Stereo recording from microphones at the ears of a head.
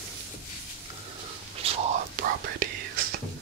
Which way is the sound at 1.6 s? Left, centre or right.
Right.